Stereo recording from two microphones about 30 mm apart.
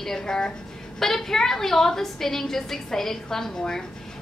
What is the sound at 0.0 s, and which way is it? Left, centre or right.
Speech, centre.